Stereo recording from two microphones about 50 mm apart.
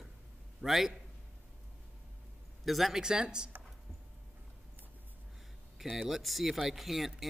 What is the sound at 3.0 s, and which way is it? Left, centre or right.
Speech, centre.